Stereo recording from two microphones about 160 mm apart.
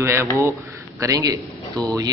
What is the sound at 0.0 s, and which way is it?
Speech, 15° right (ahead or behind).